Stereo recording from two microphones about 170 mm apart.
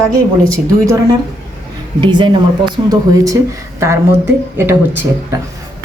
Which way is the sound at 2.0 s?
25° right (ahead or behind).